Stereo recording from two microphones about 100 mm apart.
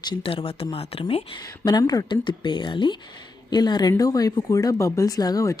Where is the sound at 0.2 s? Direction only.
65° left (ahead or behind).